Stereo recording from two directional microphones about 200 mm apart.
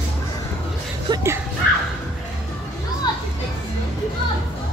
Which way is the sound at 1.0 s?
15° right (ahead or behind).